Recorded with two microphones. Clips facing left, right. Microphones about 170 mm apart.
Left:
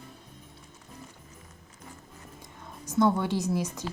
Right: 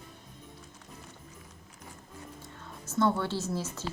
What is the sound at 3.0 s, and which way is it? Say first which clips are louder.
Speech: left 3 dB; 15° left (ahead or behind).